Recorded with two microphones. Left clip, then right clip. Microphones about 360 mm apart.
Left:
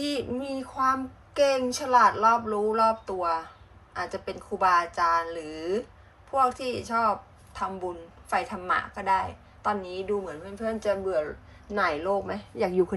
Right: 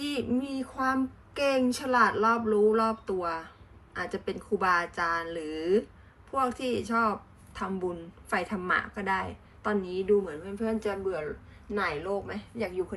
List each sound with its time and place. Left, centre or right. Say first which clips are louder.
0.0 s a woman's voice: left 1 dB; centre